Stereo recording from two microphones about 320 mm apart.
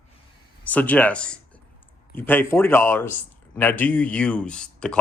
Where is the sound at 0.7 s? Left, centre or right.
Centre.